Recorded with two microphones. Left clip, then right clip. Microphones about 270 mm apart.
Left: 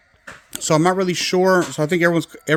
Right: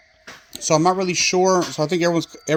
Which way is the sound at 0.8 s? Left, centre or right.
Left.